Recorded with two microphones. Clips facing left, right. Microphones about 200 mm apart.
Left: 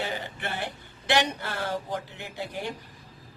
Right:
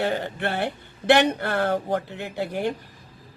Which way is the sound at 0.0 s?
60° right (ahead or behind).